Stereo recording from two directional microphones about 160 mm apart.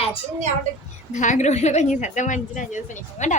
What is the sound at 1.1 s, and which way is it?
A woman's voice, 50° left (ahead or behind).